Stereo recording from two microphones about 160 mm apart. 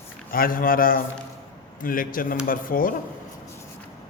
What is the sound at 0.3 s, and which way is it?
A man's voice, 65° left (ahead or behind).